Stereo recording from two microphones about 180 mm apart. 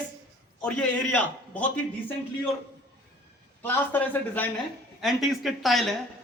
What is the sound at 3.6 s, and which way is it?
A man's voice, 10° left (ahead or behind).